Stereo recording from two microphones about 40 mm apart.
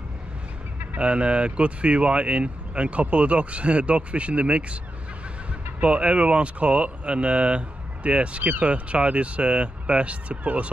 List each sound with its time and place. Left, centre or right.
0.9 s speech: right
5.8 s speech: right